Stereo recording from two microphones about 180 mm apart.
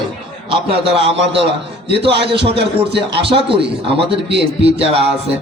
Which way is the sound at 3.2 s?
30° right (ahead or behind).